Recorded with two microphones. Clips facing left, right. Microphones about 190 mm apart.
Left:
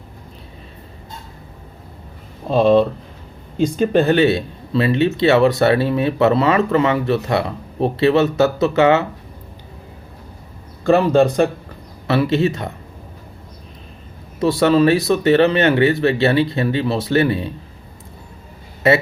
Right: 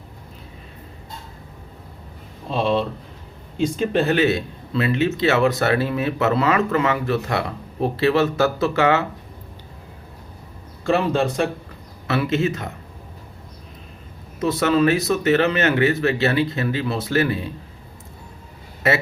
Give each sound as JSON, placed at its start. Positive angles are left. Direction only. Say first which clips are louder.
{"t": 2.5, "sound": "speech", "louder": "left 8 dB", "side_deg": 45}
{"t": 4.1, "sound": "speech", "louder": "left 4 dB", "side_deg": 30}
{"t": 10.8, "sound": "speech", "louder": "left 6 dB", "side_deg": 40}
{"t": 12.0, "sound": "speech", "louder": "left 4 dB", "side_deg": 30}
{"t": 14.4, "sound": "speech", "louder": "left 4 dB", "side_deg": 30}